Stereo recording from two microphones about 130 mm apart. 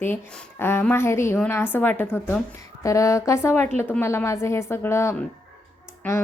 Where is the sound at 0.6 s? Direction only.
15° left (ahead or behind).